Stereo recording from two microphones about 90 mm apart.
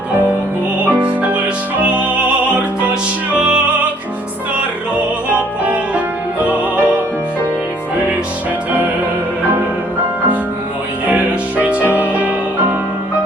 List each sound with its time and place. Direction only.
0.9 s music: 15° right (ahead or behind)
5.3 s music: 15° right (ahead or behind)
11.1 s music: 15° right (ahead or behind)